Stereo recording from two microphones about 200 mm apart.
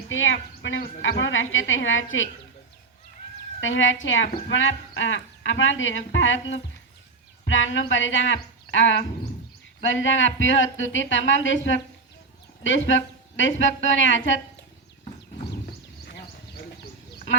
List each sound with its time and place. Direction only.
0.1 s speech: 70° left (ahead or behind)
3.6 s speech: 70° left (ahead or behind)
16.0 s a sound: 55° left (ahead or behind)